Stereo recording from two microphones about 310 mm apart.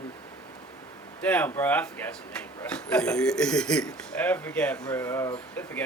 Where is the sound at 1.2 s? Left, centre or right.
Centre.